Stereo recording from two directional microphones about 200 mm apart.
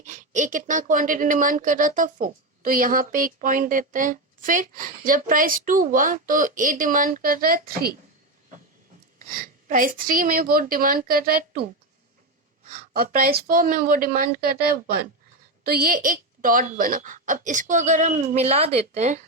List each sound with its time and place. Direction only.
0.0 s speech: 40° right (ahead or behind)
9.1 s speech: 45° right (ahead or behind)
12.7 s speech: 45° right (ahead or behind)
15.6 s a woman's voice: 50° right (ahead or behind)